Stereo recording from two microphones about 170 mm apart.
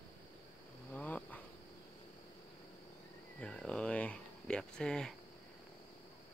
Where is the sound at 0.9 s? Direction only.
10° left (ahead or behind).